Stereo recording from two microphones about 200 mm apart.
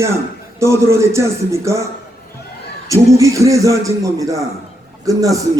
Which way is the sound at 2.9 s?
15° right (ahead or behind).